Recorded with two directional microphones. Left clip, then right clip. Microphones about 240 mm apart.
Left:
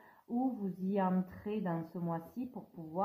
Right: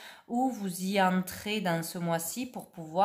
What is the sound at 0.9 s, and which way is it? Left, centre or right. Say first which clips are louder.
Speech: right 8 dB; right.